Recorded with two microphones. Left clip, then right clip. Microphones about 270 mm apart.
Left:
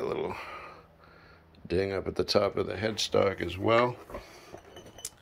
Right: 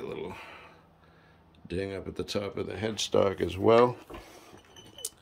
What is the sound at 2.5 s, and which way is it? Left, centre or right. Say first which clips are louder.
Speech: left 2 dB; centre.